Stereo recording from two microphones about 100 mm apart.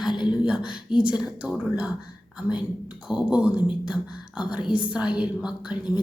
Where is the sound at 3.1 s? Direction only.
10° right (ahead or behind).